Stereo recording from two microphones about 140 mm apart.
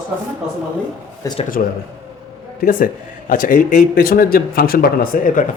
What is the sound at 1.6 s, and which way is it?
Speech, 75° left (ahead or behind).